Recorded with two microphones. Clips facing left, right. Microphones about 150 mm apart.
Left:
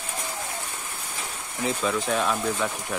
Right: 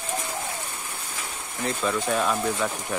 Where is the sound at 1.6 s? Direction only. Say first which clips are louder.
Even; 5° left (ahead or behind).